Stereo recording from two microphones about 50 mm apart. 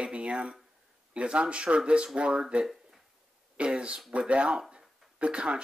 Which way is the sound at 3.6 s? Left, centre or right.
Centre.